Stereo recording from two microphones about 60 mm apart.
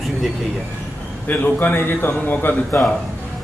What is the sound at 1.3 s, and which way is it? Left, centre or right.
A man's voice, left.